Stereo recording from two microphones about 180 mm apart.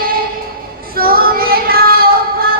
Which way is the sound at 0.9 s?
55° right (ahead or behind).